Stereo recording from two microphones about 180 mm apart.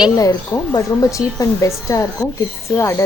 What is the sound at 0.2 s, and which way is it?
Speech, 20° left (ahead or behind).